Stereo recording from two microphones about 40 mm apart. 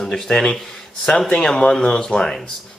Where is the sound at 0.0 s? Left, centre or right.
Centre.